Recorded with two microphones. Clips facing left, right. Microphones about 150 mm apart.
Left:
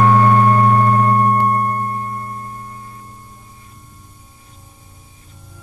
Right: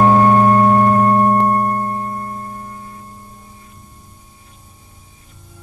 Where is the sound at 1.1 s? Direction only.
25° right (ahead or behind).